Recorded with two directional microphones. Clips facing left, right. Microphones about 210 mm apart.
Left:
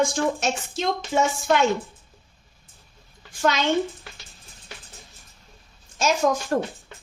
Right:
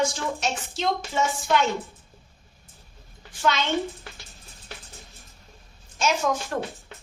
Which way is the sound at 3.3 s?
45° left (ahead or behind).